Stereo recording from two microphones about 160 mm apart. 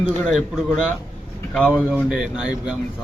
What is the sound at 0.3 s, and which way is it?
Speech, centre (ahead or behind).